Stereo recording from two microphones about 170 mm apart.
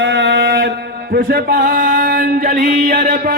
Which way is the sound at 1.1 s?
60° right (ahead or behind).